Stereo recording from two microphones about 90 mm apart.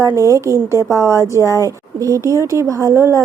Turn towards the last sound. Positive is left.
turn(degrees=-35)  # may be behind; listen again after turning